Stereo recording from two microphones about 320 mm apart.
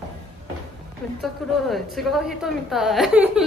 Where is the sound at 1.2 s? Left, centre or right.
Centre.